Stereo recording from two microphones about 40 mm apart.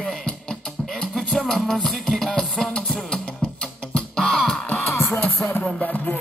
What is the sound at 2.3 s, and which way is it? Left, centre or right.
Music, centre.